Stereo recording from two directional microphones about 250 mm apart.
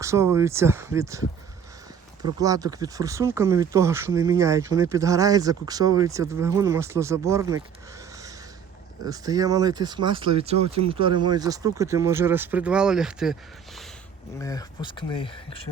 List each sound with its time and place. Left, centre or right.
0.0 s speech: centre
2.2 s speech: centre
14.3 s speech: centre